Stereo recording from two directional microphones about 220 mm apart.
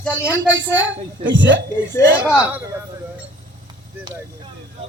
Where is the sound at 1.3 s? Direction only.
55° right (ahead or behind).